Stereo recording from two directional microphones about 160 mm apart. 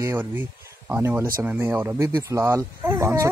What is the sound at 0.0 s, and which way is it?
Speech, 20° right (ahead or behind).